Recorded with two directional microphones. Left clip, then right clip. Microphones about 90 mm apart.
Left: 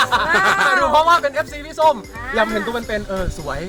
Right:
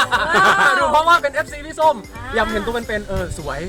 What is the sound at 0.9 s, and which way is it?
Speech, 30° right (ahead or behind).